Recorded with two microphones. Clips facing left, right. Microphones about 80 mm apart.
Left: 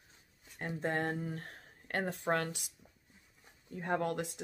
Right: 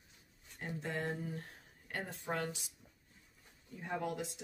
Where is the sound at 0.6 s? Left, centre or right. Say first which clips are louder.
Left 5 dB; left.